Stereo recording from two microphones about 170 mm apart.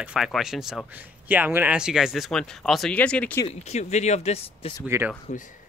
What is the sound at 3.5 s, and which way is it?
Speech, 40° left (ahead or behind).